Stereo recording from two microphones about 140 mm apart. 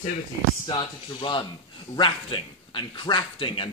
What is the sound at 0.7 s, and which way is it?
Speech, 35° left (ahead or behind).